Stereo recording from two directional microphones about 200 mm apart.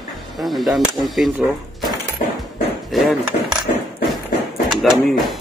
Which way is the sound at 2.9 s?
Centre (ahead or behind).